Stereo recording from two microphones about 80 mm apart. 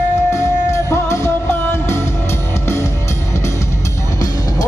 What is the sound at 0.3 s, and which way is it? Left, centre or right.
Music, left.